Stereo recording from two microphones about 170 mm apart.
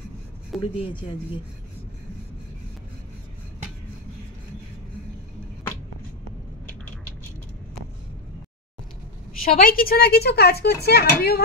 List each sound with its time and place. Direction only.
0.6 s speech: 30° left (ahead or behind)
9.4 s speech: 60° left (ahead or behind)